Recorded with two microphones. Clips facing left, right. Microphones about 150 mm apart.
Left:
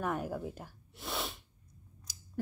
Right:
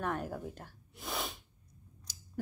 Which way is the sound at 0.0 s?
10° left (ahead or behind).